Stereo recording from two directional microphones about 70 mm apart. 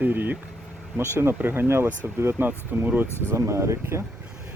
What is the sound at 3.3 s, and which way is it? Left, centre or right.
Speech, right.